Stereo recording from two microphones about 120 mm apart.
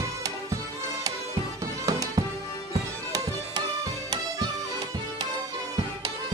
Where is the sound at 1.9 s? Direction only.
30° right (ahead or behind).